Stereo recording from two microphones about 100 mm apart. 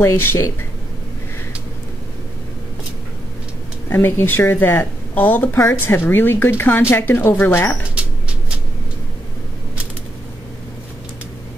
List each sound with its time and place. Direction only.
0.0 s speech: 25° left (ahead or behind)
3.9 s speech: 20° left (ahead or behind)
7.9 s a sound: 10° right (ahead or behind)